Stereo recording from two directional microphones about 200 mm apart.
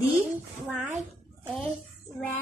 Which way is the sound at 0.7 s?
10° right (ahead or behind).